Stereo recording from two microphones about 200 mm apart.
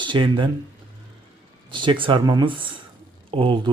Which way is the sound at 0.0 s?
25° right (ahead or behind).